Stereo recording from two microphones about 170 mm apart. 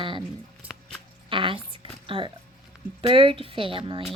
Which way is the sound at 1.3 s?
30° right (ahead or behind).